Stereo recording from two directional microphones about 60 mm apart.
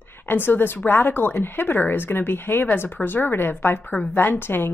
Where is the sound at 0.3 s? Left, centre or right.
Left.